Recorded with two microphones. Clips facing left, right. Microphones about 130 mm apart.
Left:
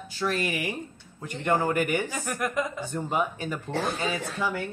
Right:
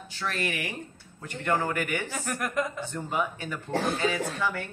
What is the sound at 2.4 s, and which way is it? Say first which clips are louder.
Speech: left 1 dB; centre (ahead or behind).